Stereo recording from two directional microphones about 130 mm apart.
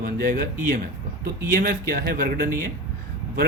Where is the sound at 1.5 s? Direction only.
90° right.